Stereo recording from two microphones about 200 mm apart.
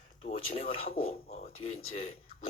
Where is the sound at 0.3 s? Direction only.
30° left (ahead or behind).